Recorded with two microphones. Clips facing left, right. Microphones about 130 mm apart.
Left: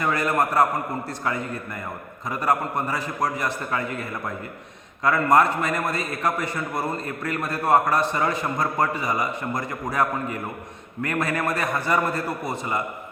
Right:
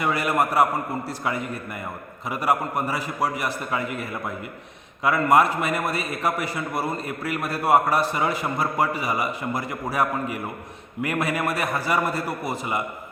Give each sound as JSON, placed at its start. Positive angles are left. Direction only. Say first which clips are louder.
{"t": 0.0, "sound": "a man's voice", "louder": "even", "side_deg": -10}
{"t": 5.0, "sound": "a man's voice", "louder": "even", "side_deg": -10}